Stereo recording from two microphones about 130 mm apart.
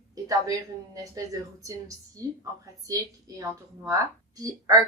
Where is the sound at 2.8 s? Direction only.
25° right (ahead or behind).